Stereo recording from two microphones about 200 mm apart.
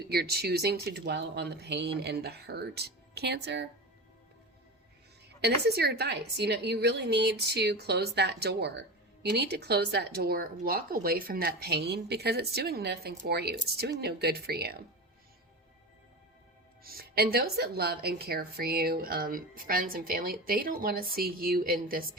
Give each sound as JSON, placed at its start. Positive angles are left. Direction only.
{"t": 0.1, "sound": "a woman's voice", "side_deg": -50}
{"t": 5.4, "sound": "a woman's voice", "side_deg": -55}
{"t": 16.8, "sound": "speech", "side_deg": -50}